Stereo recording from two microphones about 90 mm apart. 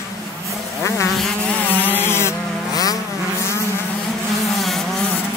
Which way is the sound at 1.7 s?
20° left (ahead or behind).